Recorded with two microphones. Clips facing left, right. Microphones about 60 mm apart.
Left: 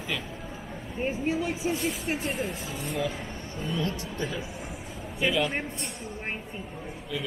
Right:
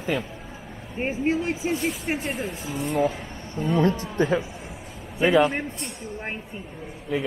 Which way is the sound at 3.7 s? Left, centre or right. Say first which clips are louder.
Right 11 dB; right.